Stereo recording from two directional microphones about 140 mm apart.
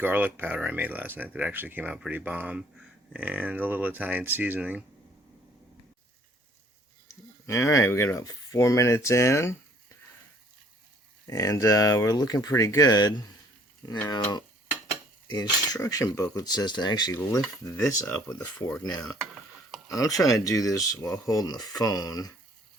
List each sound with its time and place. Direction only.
0.0 s speech: 15° right (ahead or behind)
7.4 s speech: 20° left (ahead or behind)
11.3 s speech: 25° left (ahead or behind)
18.0 s speech: 10° left (ahead or behind)
19.9 s speech: 25° left (ahead or behind)